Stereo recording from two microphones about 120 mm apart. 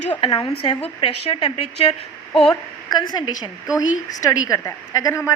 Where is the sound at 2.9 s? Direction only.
35° left (ahead or behind).